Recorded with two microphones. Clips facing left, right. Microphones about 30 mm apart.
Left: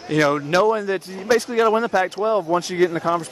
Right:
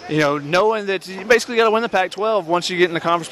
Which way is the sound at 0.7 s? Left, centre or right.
Right.